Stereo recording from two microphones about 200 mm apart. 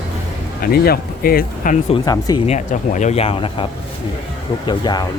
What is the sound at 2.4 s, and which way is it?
Speech, 35° left (ahead or behind).